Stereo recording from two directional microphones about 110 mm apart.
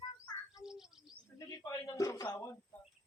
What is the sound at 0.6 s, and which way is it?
Bird, 5° right (ahead or behind).